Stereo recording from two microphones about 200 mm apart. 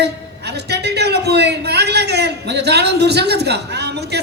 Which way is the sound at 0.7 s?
55° right (ahead or behind).